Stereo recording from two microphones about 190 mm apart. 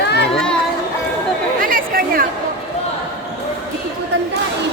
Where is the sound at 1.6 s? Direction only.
45° right (ahead or behind).